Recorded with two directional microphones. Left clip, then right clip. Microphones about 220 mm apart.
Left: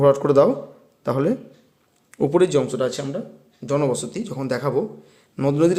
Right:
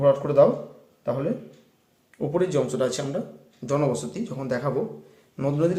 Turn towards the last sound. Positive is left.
turn(degrees=30)  # may be behind; listen again after turning